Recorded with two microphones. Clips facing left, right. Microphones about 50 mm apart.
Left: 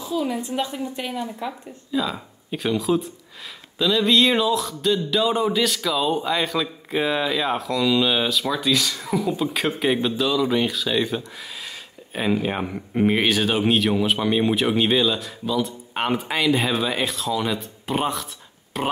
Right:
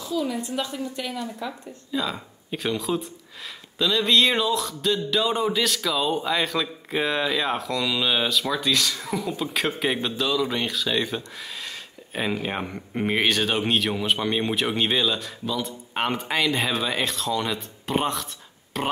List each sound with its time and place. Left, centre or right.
0.0 s a woman's voice: centre
1.9 s speech: centre